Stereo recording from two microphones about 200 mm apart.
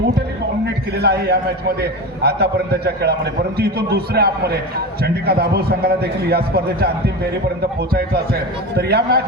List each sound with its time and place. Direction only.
0.9 s a man's voice: 55° right (ahead or behind)